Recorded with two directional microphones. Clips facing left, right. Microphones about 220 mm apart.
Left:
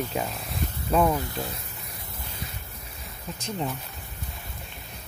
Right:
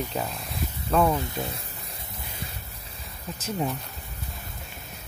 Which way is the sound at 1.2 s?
20° right (ahead or behind).